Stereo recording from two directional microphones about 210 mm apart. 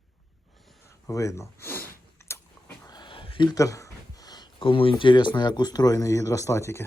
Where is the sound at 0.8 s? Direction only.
15° left (ahead or behind).